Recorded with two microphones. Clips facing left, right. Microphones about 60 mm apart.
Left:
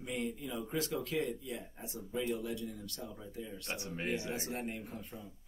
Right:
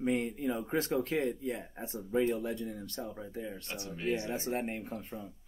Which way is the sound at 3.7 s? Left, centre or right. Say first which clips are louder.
Right 3 dB; left.